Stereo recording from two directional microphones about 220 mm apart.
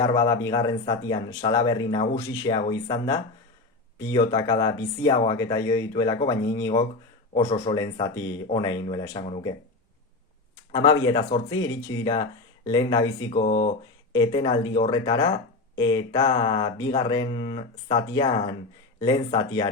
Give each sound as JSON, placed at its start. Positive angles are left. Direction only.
{"t": 0.0, "sound": "speech", "side_deg": 15}
{"t": 10.7, "sound": "speech", "side_deg": 20}
{"t": 13.3, "sound": "speech", "side_deg": 35}
{"t": 13.7, "sound": "speech", "side_deg": 20}